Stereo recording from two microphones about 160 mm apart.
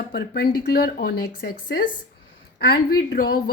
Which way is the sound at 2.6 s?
85° left.